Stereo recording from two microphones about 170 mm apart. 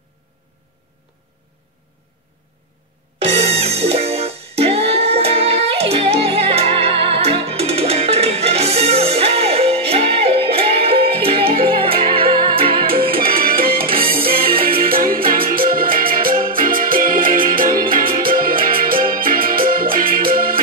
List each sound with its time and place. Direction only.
3.3 s music: 35° right (ahead or behind)
13.8 s music: 35° right (ahead or behind)
14.9 s music: 60° right (ahead or behind)